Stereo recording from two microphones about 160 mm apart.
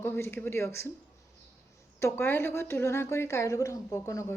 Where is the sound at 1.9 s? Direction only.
15° left (ahead or behind).